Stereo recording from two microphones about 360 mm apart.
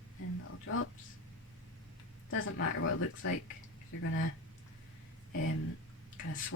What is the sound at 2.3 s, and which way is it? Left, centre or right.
Speech, left.